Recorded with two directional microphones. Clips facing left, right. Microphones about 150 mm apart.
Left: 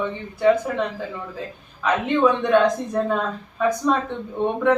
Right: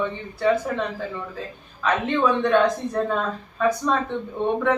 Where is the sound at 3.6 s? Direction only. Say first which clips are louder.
Even; 15° left (ahead or behind).